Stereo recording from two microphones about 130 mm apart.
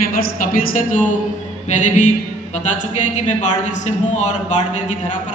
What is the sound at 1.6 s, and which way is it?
Music, 70° left (ahead or behind).